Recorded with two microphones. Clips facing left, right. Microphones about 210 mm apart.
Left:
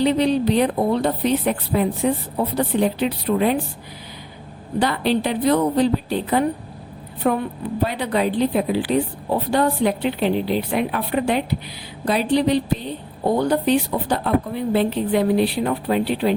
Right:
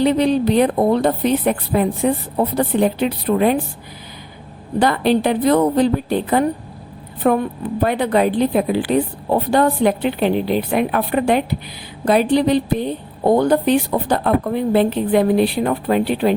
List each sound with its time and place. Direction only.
0.0 s a woman's voice: 50° right (ahead or behind)
4.8 s a woman's voice: 50° right (ahead or behind)